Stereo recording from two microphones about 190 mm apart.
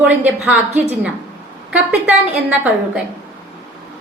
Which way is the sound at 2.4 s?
10° right (ahead or behind).